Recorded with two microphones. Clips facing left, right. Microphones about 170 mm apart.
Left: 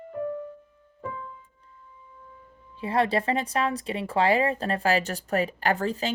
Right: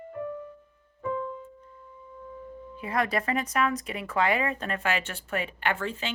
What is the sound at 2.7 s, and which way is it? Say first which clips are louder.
Speech: left 4 dB; 30° left (ahead or behind).